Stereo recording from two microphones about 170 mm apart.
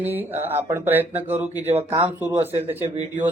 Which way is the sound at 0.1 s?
10° right (ahead or behind).